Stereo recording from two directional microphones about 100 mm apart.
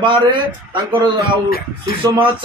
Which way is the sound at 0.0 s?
55° right (ahead or behind).